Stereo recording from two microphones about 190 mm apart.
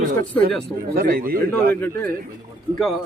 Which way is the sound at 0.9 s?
50° right (ahead or behind).